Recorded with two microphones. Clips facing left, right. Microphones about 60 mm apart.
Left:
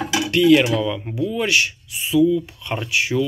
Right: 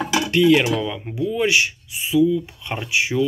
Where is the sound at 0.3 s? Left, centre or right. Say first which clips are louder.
Left 2 dB; right.